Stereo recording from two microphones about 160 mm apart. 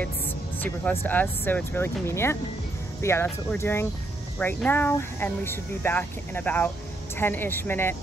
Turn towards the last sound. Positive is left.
turn(degrees=15)  # may be behind; listen again after turning